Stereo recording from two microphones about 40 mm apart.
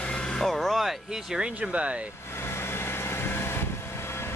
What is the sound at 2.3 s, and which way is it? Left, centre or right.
Vehicle, left.